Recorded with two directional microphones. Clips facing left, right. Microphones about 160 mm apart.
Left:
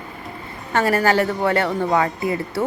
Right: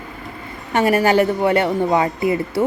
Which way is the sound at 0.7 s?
20° right (ahead or behind).